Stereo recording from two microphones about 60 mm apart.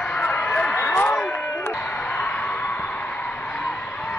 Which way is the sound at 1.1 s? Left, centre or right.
Left.